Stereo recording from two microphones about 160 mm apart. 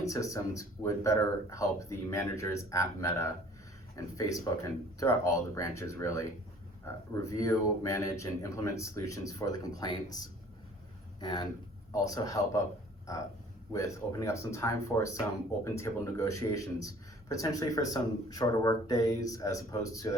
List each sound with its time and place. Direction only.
0.0 s speech: 20° left (ahead or behind)
13.7 s speech: 20° left (ahead or behind)